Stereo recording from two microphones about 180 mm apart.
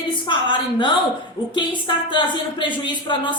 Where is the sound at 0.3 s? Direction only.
25° left (ahead or behind).